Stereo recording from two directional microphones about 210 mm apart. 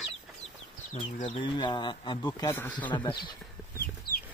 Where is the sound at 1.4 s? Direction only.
20° left (ahead or behind).